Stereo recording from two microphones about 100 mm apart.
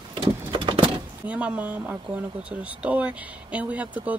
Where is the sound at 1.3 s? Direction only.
15° right (ahead or behind).